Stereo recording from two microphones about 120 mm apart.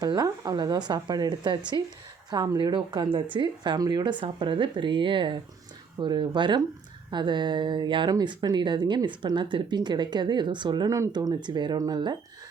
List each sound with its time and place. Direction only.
0.0 s speech: 35° right (ahead or behind)